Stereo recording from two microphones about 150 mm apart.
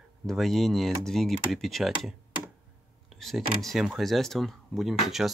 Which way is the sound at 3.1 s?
Centre (ahead or behind).